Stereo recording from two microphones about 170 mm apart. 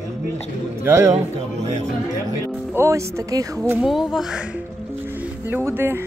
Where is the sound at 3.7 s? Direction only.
Centre (ahead or behind).